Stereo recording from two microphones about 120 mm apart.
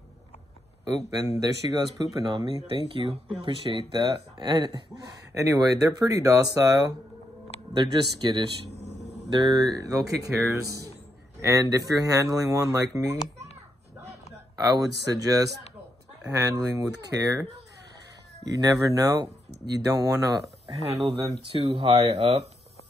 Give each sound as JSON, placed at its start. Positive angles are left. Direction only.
{"t": 1.4, "sound": "speech", "side_deg": -30}
{"t": 2.6, "sound": "speech", "side_deg": -50}
{"t": 5.3, "sound": "speech", "side_deg": -25}
{"t": 8.7, "sound": "a sound", "side_deg": -65}
{"t": 9.3, "sound": "speech", "side_deg": -35}
{"t": 14.6, "sound": "speech", "side_deg": -30}
{"t": 18.5, "sound": "speech", "side_deg": -30}
{"t": 20.7, "sound": "speech", "side_deg": -60}